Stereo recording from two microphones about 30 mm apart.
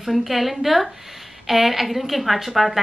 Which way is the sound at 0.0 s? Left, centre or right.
Centre.